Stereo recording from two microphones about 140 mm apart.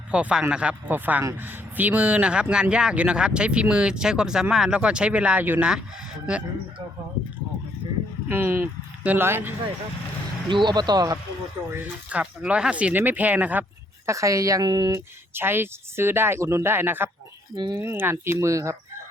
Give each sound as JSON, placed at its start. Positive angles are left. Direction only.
{"t": 0.1, "sound": "a man's voice", "side_deg": -10}
{"t": 8.3, "sound": "a man's voice", "side_deg": -15}
{"t": 10.5, "sound": "speech", "side_deg": -35}
{"t": 11.7, "sound": "a man's voice", "side_deg": -10}
{"t": 14.1, "sound": "speech", "side_deg": -25}
{"t": 15.4, "sound": "a man's voice", "side_deg": -15}
{"t": 17.5, "sound": "speech", "side_deg": -30}
{"t": 17.7, "sound": "speech", "side_deg": -15}